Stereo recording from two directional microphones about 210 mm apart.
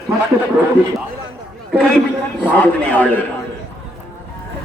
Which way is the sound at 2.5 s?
5° left (ahead or behind).